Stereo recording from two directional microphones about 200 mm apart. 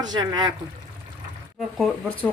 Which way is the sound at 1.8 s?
5° left (ahead or behind).